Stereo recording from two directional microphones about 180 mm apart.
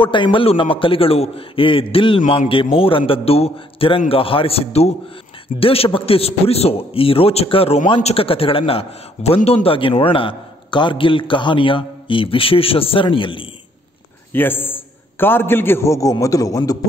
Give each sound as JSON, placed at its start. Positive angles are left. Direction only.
{"t": 0.0, "sound": "a man's voice", "side_deg": 25}
{"t": 14.3, "sound": "a man's voice", "side_deg": 10}